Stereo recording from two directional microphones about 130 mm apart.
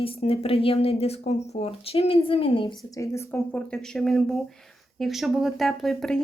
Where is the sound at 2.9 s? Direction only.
25° left (ahead or behind).